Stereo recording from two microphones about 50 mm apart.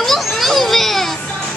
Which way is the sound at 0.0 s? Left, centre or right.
Centre.